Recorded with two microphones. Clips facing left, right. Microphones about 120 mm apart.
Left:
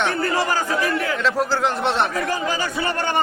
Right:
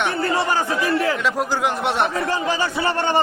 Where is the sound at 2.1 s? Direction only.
30° right (ahead or behind).